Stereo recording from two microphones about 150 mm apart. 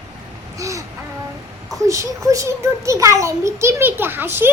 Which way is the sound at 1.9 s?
20° right (ahead or behind).